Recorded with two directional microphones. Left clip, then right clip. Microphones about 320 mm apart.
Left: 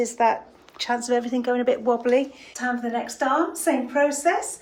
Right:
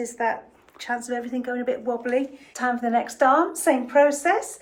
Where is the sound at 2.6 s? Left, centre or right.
Centre.